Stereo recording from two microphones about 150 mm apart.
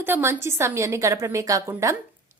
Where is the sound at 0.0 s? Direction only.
15° right (ahead or behind).